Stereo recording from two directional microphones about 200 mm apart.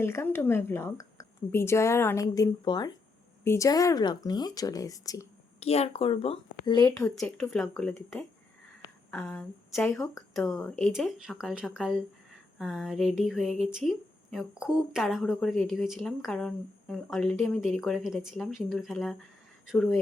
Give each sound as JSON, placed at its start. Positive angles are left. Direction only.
{"t": 0.0, "sound": "a woman's voice", "side_deg": 10}
{"t": 5.5, "sound": "speech", "side_deg": 30}
{"t": 7.5, "sound": "a woman's voice", "side_deg": 5}